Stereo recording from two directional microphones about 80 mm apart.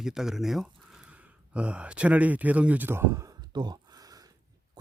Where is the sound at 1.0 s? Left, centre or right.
Centre; by 3.2 s right.